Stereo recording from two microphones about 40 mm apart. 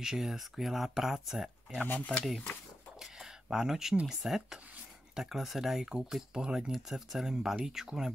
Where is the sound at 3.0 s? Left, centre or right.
Centre.